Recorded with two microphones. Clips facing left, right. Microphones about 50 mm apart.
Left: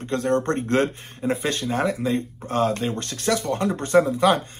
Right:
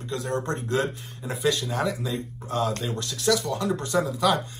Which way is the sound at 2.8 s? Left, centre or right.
Left.